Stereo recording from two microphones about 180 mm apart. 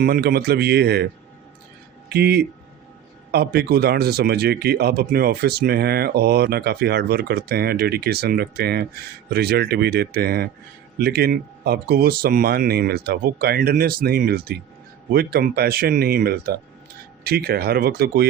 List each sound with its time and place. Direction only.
0.0 s speech: 60° right (ahead or behind)
2.0 s speech: 60° right (ahead or behind)